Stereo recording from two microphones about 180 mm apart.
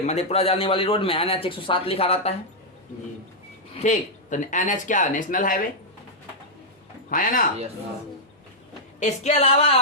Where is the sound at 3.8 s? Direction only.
45° left (ahead or behind).